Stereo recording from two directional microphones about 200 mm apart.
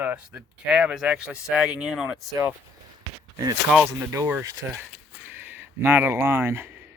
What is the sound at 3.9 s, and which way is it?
Speech, 15° right (ahead or behind).